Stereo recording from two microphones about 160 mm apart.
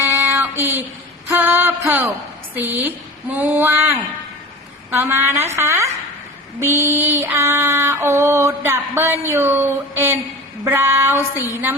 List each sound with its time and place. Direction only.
0.0 s child singing: 10° right (ahead or behind)
1.3 s a sound: 15° right (ahead or behind)
2.6 s female singing: 10° right (ahead or behind)